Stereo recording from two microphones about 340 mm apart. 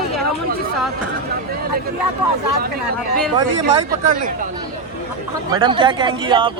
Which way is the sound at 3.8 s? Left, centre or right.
Right.